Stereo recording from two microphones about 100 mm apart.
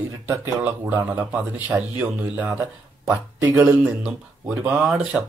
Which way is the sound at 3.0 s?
20° right (ahead or behind).